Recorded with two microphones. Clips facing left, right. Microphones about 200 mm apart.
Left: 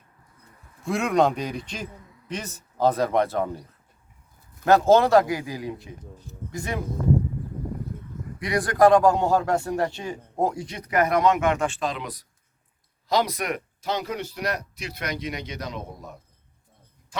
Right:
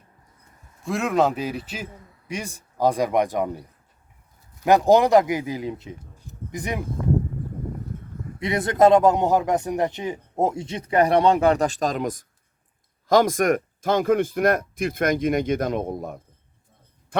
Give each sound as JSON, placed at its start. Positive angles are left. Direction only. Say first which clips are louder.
{"t": 0.9, "sound": "a man's voice", "louder": "even", "side_deg": 0}
{"t": 8.4, "sound": "a man's voice", "louder": "right 1 dB", "side_deg": -25}